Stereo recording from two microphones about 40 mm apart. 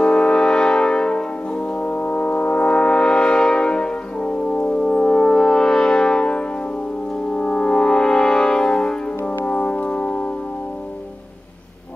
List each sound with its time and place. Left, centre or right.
0.0 s brass instrument: left
4.8 s french horn: centre
7.3 s music: left